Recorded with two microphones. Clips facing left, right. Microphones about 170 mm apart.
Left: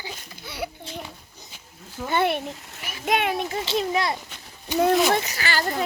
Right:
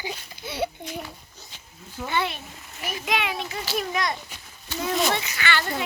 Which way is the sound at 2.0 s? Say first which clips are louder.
Left 5 dB; 55° left (ahead or behind).